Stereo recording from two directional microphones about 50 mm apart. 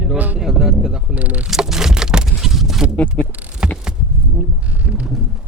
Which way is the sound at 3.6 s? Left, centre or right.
Centre.